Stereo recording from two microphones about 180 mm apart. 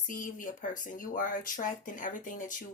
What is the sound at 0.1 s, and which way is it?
Speech, 45° left (ahead or behind).